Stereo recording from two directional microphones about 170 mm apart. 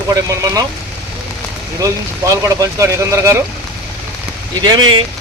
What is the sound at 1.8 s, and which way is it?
Speech, 20° right (ahead or behind).